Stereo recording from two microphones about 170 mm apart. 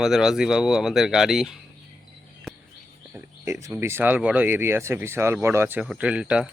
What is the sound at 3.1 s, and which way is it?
Speech, 15° right (ahead or behind).